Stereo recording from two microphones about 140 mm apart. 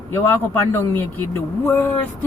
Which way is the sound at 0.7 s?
15° left (ahead or behind).